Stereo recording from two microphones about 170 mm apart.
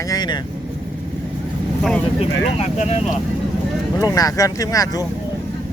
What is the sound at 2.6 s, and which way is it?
Speech, 40° left (ahead or behind).